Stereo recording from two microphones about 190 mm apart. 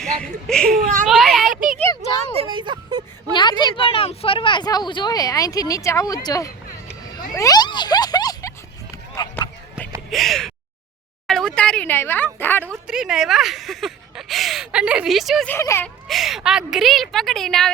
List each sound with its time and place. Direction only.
0.0 s a child's voice: 5° left (ahead or behind)
0.8 s a child's voice: 45° right (ahead or behind)
1.0 s a sound: centre (ahead or behind)
2.4 s a sound: 25° right (ahead or behind)
3.3 s speech: 25° left (ahead or behind)
7.3 s a sound: 20° left (ahead or behind)
10.1 s gasp: centre (ahead or behind)
11.3 s speech: centre (ahead or behind)
12.6 s a woman's voice: 10° right (ahead or behind)
13.0 s speech: centre (ahead or behind)
15.5 s speech: 15° left (ahead or behind)
16.0 s speech: centre (ahead or behind)